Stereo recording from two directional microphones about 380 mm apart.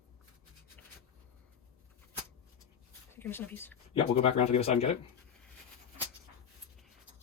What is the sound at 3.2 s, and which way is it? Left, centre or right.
Speech, centre.